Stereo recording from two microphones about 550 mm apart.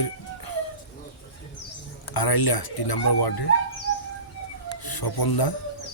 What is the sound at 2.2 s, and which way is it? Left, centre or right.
Speech, left.